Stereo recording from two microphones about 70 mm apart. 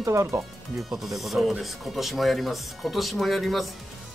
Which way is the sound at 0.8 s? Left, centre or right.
Centre.